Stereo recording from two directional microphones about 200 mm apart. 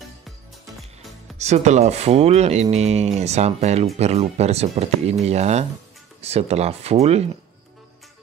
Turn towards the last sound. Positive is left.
turn(degrees=-30)  # may be behind; listen again after turning